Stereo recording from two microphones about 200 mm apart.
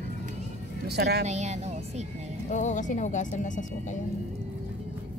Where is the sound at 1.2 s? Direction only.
35° right (ahead or behind).